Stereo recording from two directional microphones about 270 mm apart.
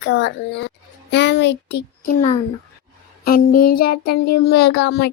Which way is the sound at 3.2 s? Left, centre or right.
Left.